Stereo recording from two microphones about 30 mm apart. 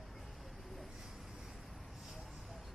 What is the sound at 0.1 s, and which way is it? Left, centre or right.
Vehicle, centre.